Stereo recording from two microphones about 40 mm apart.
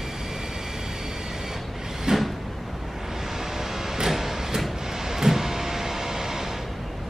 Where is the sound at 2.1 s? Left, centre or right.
Centre.